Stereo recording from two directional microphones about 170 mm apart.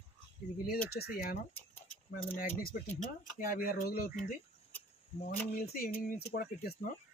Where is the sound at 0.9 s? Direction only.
70° left (ahead or behind).